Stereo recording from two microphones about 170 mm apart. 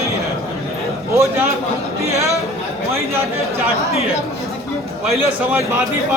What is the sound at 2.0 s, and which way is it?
Speech, 15° right (ahead or behind).